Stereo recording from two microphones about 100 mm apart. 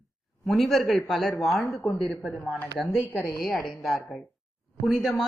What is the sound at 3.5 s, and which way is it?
A woman's voice, centre (ahead or behind).